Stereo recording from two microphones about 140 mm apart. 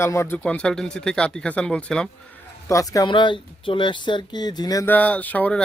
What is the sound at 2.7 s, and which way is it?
Speech, 25° left (ahead or behind).